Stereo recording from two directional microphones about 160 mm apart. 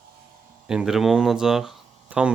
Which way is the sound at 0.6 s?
5° right (ahead or behind).